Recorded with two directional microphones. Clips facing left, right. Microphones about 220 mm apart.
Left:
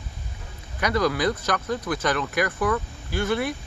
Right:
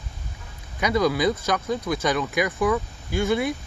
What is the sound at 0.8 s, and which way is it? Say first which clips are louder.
Speech: right 2 dB; 10° right (ahead or behind).